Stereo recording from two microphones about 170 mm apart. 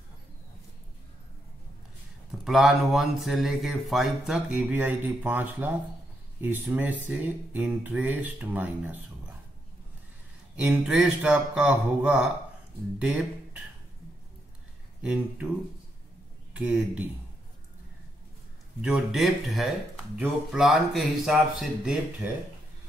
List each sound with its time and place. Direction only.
2.4 s speech: centre (ahead or behind)
10.5 s speech: 5° right (ahead or behind)
16.5 s speech: 5° right (ahead or behind)
18.8 s speech: 5° right (ahead or behind)